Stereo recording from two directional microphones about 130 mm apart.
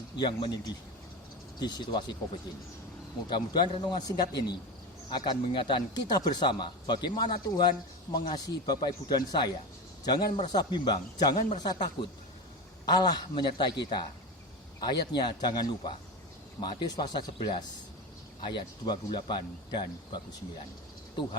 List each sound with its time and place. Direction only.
0.2 s speech: 35° left (ahead or behind)
3.2 s speech: 35° left (ahead or behind)
11.3 s speech: 65° left (ahead or behind)
11.6 s speech: 35° left (ahead or behind)